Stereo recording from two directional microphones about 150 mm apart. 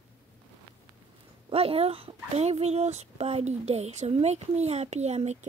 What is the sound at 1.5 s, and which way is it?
Speech, 40° right (ahead or behind).